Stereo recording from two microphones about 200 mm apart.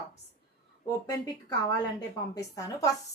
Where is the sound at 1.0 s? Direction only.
20° left (ahead or behind).